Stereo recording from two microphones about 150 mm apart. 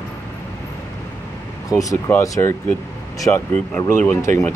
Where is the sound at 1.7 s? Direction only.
20° left (ahead or behind).